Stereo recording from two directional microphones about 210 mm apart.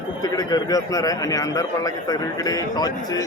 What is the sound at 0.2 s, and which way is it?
A man's voice, 15° left (ahead or behind).